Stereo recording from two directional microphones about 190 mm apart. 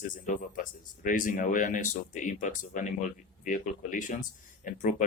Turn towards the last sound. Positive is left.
turn(degrees=40)  # may be behind; listen again after turning